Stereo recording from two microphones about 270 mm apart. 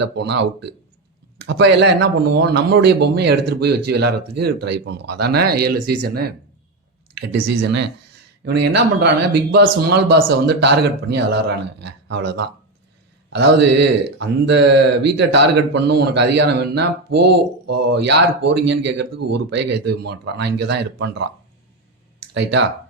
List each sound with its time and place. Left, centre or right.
0.0 s speech: right
7.3 s speech: right
7.6 s speech: right
22.4 s speech: right